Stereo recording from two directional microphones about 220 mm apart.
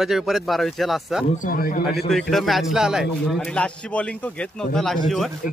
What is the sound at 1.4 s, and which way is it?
Speech, 40° left (ahead or behind).